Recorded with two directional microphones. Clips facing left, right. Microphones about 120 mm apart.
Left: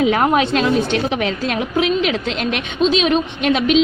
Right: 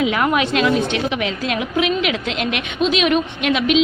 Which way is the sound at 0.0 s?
35° left (ahead or behind).